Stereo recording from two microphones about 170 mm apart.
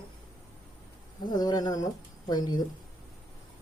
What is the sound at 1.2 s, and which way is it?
Speech, 25° left (ahead or behind).